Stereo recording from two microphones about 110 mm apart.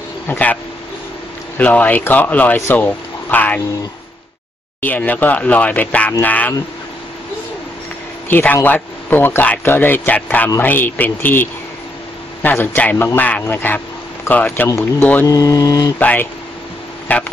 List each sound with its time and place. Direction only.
0.3 s speech: 15° left (ahead or behind)
1.6 s speech: 15° left (ahead or behind)
4.8 s speech: 15° left (ahead or behind)
8.3 s speech: 15° left (ahead or behind); by 15.9 s 35° left (ahead or behind)
16.0 s speech: 15° left (ahead or behind)